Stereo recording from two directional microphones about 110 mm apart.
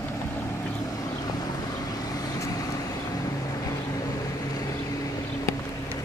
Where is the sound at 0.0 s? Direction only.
25° left (ahead or behind).